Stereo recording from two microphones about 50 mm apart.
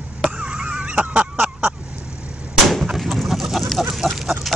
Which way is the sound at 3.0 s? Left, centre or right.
Centre.